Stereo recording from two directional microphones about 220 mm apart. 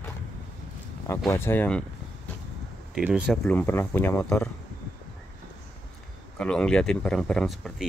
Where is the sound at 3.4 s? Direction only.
10° left (ahead or behind).